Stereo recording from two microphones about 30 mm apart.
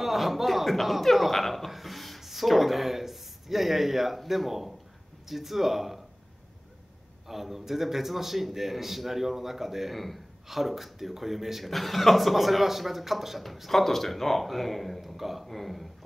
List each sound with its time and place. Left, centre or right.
0.0 s a man's voice: centre
7.2 s a man's voice: centre
9.9 s a man's voice: centre